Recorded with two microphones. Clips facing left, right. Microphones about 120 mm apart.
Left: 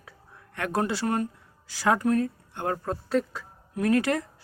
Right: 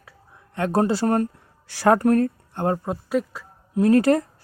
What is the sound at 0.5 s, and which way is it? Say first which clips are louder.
Speech: right 7 dB; 30° right (ahead or behind).